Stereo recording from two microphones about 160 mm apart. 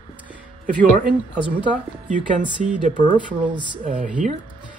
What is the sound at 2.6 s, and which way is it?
Speech, 55° right (ahead or behind).